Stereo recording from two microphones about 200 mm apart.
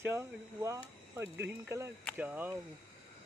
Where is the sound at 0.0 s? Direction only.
15° right (ahead or behind).